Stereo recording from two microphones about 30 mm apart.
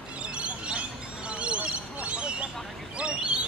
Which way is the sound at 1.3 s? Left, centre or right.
Right.